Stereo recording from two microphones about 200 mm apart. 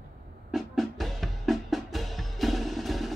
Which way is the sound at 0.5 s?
Centre (ahead or behind).